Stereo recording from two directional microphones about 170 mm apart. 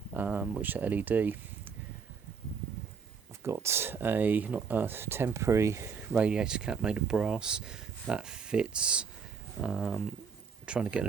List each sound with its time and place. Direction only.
0.1 s speech: 10° right (ahead or behind)
3.4 s speech: 15° right (ahead or behind)